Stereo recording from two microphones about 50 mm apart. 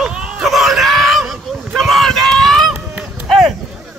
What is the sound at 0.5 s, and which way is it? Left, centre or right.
Screaming, centre.